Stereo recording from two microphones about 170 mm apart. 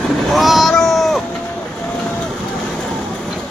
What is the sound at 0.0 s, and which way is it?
Cat, centre (ahead or behind).